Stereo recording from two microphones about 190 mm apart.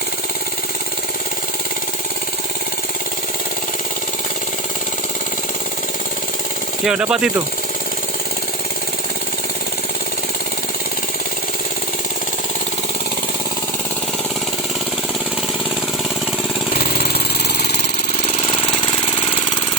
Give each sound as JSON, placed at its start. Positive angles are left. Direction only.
{"t": 6.8, "sound": "speech", "side_deg": -5}
{"t": 16.7, "sound": "a sound", "side_deg": 55}
{"t": 18.8, "sound": "engine", "side_deg": 25}